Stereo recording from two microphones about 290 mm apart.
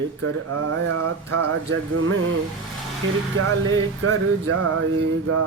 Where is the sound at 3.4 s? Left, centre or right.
Right.